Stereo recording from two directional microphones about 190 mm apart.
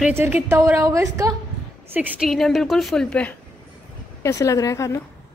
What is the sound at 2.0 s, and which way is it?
A woman's voice, centre (ahead or behind).